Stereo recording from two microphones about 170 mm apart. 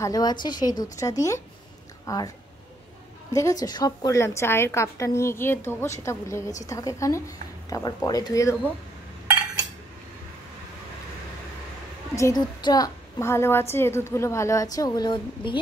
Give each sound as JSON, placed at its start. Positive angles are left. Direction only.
{"t": 0.0, "sound": "a woman's voice", "side_deg": 20}
{"t": 3.3, "sound": "a woman's voice", "side_deg": 20}
{"t": 12.2, "sound": "a woman's voice", "side_deg": 20}